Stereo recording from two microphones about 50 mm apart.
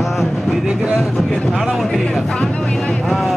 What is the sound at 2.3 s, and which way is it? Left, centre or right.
Vehicle, centre.